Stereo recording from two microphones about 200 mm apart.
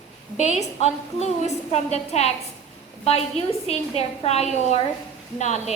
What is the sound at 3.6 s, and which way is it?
A woman's voice, 30° left (ahead or behind).